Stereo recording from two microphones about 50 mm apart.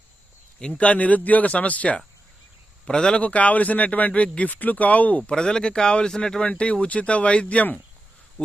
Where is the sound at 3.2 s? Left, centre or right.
Left; by 6.4 s centre.